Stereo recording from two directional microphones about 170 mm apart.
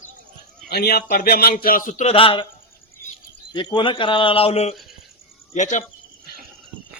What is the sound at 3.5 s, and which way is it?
Speech, 25° left (ahead or behind).